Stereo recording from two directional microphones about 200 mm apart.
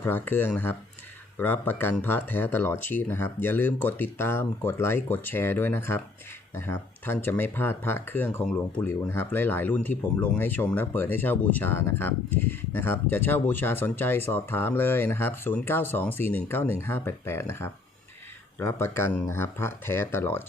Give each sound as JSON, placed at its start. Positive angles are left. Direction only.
{"t": 0.0, "sound": "speech", "side_deg": 10}